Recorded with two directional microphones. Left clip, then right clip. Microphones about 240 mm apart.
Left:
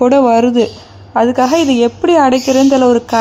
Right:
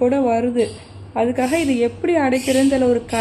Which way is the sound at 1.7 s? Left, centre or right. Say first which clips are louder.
Left 7 dB; left.